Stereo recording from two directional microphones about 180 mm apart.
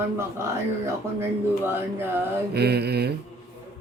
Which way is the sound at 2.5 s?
65° right (ahead or behind).